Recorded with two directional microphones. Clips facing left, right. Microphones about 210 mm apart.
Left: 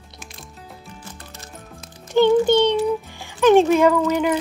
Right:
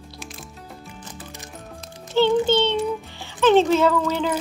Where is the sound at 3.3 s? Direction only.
15° left (ahead or behind).